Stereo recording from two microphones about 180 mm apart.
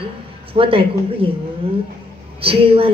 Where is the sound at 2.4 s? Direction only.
30° right (ahead or behind).